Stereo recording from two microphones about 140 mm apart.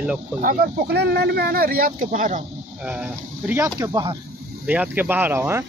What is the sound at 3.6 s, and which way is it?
Speech, 25° right (ahead or behind).